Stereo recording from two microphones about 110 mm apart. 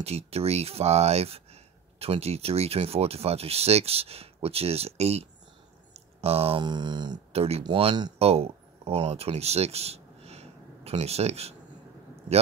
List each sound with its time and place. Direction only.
0.0 s speech: 70° right (ahead or behind)
5.9 s a sound: 65° right (ahead or behind)
6.6 s a sound: 40° right (ahead or behind)
7.3 s speech: 70° right (ahead or behind)
7.6 s speech: 45° right (ahead or behind)
8.2 s speech: 65° right (ahead or behind)